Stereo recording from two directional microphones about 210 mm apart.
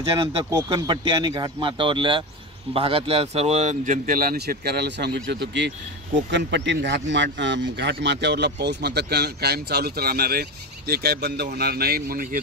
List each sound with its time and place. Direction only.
0.5 s speech: 15° right (ahead or behind); by 12.4 s 45° right (ahead or behind)